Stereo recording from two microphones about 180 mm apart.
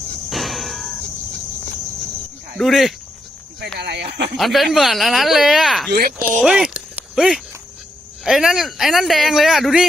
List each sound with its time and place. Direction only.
0.3 s a sound: centre (ahead or behind)
2.6 s speech: centre (ahead or behind)
3.8 s speech: 70° right (ahead or behind)
4.4 s speech: centre (ahead or behind)
5.9 s speech: 55° right (ahead or behind)
6.4 s speech: 5° right (ahead or behind)